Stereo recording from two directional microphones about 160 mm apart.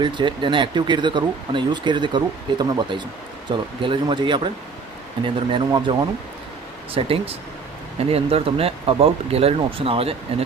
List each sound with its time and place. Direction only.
0.0 s speech: 30° right (ahead or behind)